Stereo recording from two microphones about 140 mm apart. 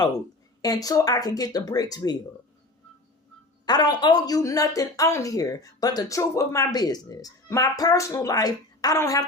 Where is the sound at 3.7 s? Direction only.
30° left (ahead or behind).